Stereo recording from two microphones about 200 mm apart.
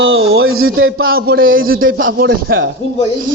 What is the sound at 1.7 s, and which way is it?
Speech, 80° right.